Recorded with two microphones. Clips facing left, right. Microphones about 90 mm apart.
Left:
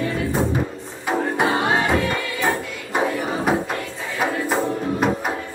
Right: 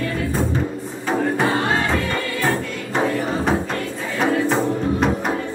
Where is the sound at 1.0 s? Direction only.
15° left (ahead or behind).